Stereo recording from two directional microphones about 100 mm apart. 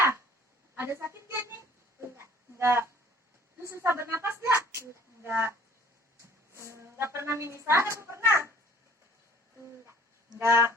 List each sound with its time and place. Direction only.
0.8 s music: 25° right (ahead or behind)
2.0 s a sound: 25° right (ahead or behind)
3.6 s a woman's voice: 30° right (ahead or behind)
10.3 s a woman's voice: 25° right (ahead or behind)